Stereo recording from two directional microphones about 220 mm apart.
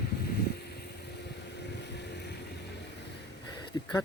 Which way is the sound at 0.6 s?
50° left (ahead or behind).